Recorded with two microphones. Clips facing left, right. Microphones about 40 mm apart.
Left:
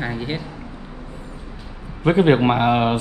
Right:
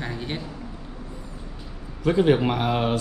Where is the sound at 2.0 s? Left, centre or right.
Left.